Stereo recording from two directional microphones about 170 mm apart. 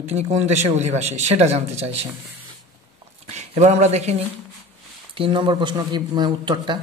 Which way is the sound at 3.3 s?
40° right (ahead or behind).